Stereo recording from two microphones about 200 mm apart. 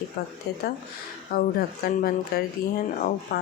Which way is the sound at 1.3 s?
50° left (ahead or behind).